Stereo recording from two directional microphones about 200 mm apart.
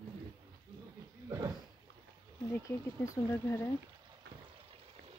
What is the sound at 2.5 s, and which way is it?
Speech, 15° left (ahead or behind).